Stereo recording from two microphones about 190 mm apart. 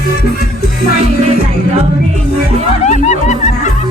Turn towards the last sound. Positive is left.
turn(degrees=40)  # may be behind; listen again after turning